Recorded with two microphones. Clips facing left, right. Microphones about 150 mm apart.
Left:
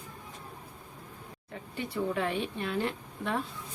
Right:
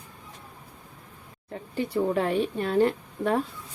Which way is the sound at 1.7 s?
35° right (ahead or behind).